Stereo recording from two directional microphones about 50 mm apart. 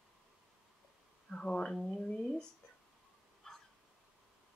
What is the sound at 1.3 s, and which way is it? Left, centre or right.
Speech, centre.